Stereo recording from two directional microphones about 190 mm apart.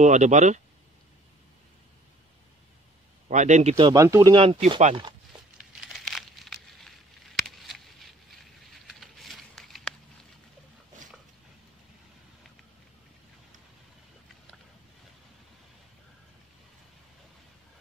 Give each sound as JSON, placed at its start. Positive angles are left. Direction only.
{"t": 0.0, "sound": "speech", "side_deg": -40}
{"t": 3.3, "sound": "speech", "side_deg": -40}
{"t": 3.7, "sound": "speech", "side_deg": -20}
{"t": 5.6, "sound": "a sound", "side_deg": 0}